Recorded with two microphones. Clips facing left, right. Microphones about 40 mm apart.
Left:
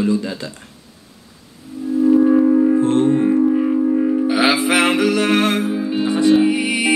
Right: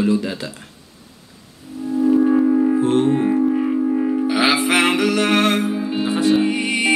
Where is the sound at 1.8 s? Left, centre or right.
Centre.